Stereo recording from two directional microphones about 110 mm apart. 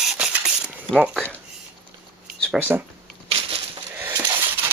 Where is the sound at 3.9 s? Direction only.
20° right (ahead or behind).